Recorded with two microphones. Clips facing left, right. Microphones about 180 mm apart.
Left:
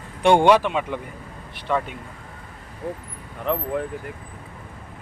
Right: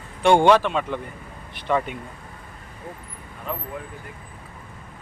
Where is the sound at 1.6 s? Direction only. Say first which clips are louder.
Right 1 dB; centre (ahead or behind).